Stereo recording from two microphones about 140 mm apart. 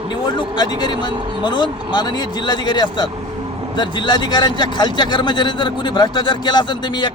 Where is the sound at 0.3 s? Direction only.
35° left (ahead or behind).